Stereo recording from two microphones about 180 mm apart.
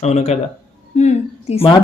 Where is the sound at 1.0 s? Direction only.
35° left (ahead or behind).